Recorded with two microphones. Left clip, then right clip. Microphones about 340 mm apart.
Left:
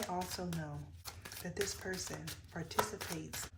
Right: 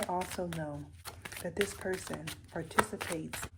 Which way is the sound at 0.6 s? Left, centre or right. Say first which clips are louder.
Right 7 dB; right.